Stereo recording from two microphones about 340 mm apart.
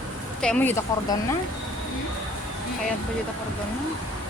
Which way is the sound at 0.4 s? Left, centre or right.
Centre.